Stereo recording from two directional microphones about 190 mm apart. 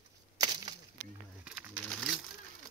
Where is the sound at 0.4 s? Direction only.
20° right (ahead or behind).